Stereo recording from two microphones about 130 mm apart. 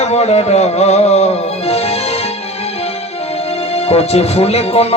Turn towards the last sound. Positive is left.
turn(degrees=50)  # may be behind; listen again after turning